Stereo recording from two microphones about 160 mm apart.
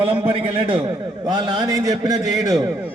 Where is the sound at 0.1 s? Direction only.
35° right (ahead or behind).